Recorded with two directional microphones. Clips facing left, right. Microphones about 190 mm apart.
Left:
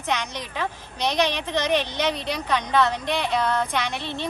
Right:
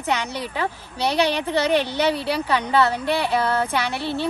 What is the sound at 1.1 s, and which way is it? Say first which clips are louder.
Speech: right 3 dB; 10° right (ahead or behind).